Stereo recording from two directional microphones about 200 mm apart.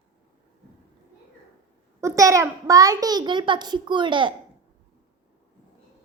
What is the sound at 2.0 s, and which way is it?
A child's voice, 15° right (ahead or behind).